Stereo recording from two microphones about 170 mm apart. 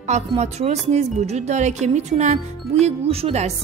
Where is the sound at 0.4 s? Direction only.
40° right (ahead or behind).